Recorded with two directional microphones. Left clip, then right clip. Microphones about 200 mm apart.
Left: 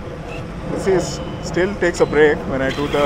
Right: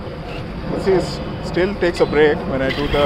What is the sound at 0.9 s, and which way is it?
Speech, 15° left (ahead or behind).